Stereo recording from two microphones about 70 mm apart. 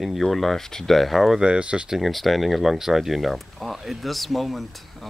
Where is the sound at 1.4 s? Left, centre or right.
Centre.